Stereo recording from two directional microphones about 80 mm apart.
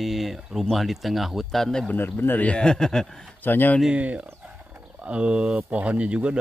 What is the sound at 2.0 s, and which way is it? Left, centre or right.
Speech, left.